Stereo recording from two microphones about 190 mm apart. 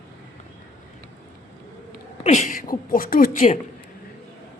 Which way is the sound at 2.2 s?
40° left (ahead or behind).